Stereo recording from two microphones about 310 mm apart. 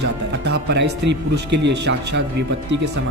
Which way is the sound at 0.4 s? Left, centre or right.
Right.